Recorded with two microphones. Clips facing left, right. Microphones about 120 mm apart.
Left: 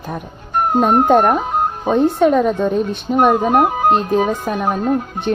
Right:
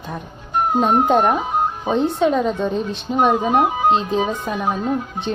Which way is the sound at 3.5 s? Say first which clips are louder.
Left 2 dB; 50° left (ahead or behind).